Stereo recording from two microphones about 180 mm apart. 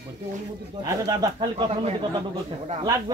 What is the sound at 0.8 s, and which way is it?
Speech, 20° right (ahead or behind).